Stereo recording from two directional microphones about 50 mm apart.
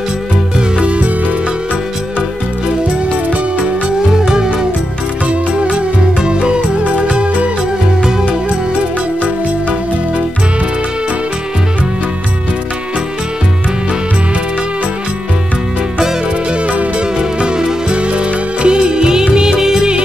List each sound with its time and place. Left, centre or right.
0.6 s music: right
4.2 s music: centre
5.7 s music: centre
17.2 s music: centre